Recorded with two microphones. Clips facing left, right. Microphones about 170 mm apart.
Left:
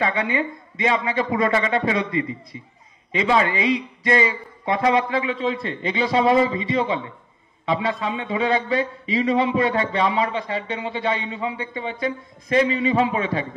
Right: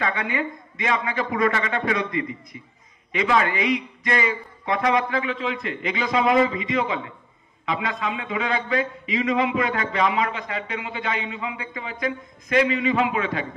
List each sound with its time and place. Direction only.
0.0 s a man's voice: 25° left (ahead or behind)